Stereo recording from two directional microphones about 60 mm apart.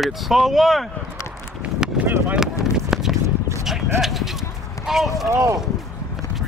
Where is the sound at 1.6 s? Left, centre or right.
Right.